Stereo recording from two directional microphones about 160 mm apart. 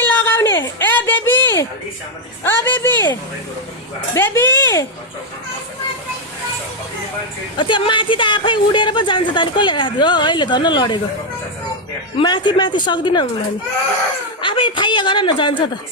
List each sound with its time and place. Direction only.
0.0 s a sound: 15° left (ahead or behind)
2.4 s speech: 15° left (ahead or behind)
4.1 s speech: 15° left (ahead or behind)
7.6 s speech: 30° left (ahead or behind)
12.2 s speech: 25° left (ahead or behind)
14.4 s speech: 30° left (ahead or behind)